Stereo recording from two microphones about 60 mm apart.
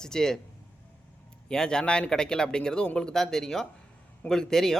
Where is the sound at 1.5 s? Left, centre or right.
Centre.